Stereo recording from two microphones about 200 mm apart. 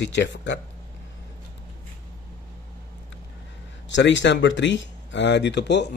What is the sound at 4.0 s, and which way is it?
Speech, 65° left (ahead or behind).